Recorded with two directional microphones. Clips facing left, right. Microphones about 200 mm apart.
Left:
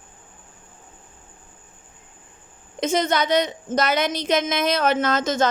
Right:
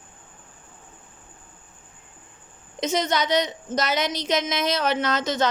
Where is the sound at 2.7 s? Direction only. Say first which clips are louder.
Left 3 dB; 50° left (ahead or behind).